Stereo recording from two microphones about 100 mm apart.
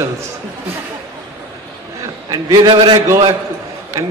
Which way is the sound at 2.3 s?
40° right (ahead or behind).